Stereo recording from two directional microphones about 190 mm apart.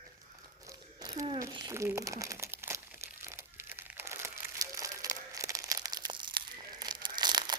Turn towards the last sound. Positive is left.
turn(degrees=-20)  # may be behind; listen again after turning